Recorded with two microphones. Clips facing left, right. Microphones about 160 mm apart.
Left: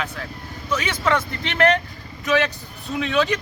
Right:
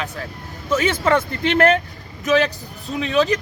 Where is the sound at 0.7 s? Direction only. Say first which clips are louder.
Right 6 dB; 45° right (ahead or behind).